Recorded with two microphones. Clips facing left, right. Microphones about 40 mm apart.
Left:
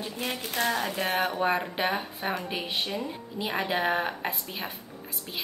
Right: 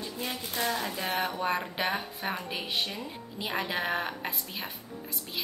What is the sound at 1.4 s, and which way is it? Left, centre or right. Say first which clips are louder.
Speech: left 3 dB; centre.